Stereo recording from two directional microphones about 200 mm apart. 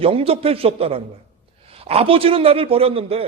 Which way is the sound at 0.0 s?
30° right (ahead or behind).